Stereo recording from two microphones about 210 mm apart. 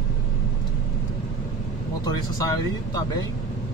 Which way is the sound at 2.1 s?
15° left (ahead or behind).